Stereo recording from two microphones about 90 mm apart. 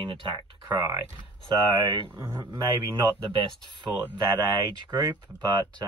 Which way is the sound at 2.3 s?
55° right (ahead or behind).